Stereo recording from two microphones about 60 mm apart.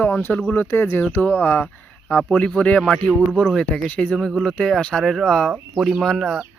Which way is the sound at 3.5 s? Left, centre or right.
Centre.